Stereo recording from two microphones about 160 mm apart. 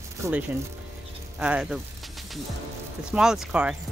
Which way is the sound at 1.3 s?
5° right (ahead or behind).